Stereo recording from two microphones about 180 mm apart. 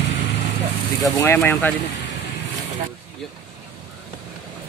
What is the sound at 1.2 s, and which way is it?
Speech, 15° left (ahead or behind).